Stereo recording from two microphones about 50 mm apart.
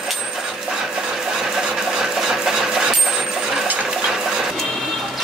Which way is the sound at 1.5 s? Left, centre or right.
Centre.